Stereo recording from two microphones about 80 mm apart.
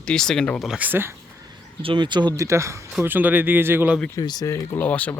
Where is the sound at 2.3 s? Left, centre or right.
Right.